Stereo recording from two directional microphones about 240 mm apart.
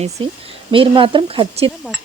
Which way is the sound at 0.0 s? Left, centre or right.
Right.